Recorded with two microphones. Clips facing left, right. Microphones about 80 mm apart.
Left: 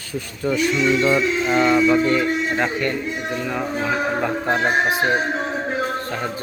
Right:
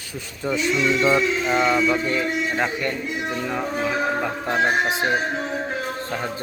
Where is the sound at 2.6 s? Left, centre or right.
Centre.